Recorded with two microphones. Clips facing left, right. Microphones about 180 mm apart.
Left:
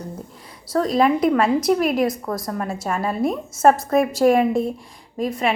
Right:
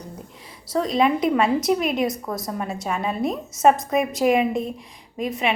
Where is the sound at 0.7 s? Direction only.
Centre (ahead or behind).